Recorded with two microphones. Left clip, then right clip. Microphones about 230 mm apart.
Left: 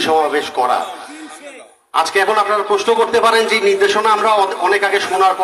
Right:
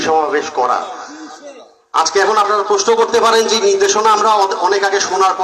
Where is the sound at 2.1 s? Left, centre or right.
Left.